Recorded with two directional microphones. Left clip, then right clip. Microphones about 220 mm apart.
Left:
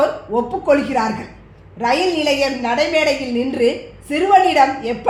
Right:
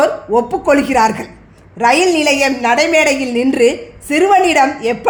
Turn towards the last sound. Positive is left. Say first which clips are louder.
# right 2 dB
turn(degrees=-45)  # may be behind; listen again after turning